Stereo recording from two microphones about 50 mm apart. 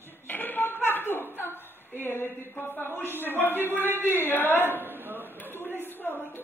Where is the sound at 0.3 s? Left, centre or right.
Left.